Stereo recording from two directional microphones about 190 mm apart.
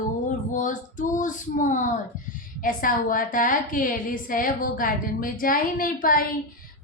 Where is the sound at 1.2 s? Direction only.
40° left (ahead or behind).